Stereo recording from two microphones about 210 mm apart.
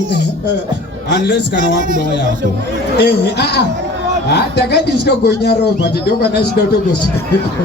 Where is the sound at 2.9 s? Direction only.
55° left (ahead or behind).